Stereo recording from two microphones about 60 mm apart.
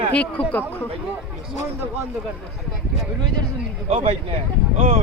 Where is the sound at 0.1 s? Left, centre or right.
Left.